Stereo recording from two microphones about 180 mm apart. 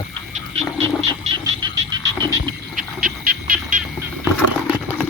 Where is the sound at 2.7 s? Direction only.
50° right (ahead or behind).